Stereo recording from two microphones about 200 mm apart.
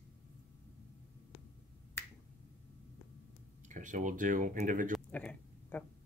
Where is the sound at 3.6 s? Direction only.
40° right (ahead or behind).